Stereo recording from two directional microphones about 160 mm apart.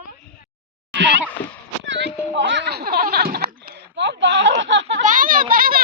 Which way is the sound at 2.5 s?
90° right.